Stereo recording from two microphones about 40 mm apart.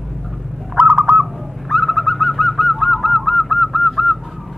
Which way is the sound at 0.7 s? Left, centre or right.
Centre.